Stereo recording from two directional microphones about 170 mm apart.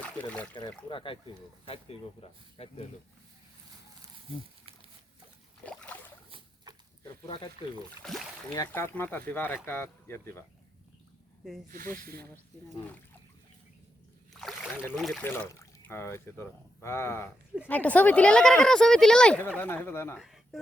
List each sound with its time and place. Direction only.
0.0 s speech: 10° left (ahead or behind)
0.9 s speech: 30° left (ahead or behind)
5.6 s boat: 10° left (ahead or behind)
7.0 s a sound: 25° left (ahead or behind)
8.0 s speech: centre (ahead or behind)
8.5 s speech: 15° left (ahead or behind)
11.7 s speech: 55° right (ahead or behind)
14.3 s boat: centre (ahead or behind)
14.9 s speech: centre (ahead or behind)
15.2 s speech: 10° left (ahead or behind)
20.1 s a sound: centre (ahead or behind)